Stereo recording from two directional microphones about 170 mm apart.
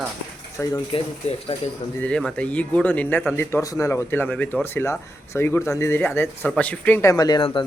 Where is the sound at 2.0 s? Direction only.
5° left (ahead or behind); by 7.7 s 30° left (ahead or behind).